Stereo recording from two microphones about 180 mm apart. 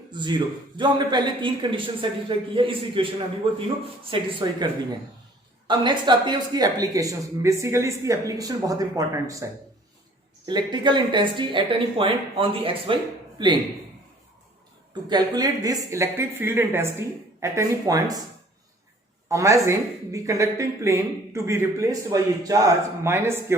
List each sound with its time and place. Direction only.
0.1 s a woman's voice: 25° right (ahead or behind)
15.1 s speech: 20° right (ahead or behind)
19.3 s speech: 15° right (ahead or behind)